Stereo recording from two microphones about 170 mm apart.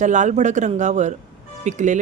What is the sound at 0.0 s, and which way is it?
Speech, 45° right (ahead or behind).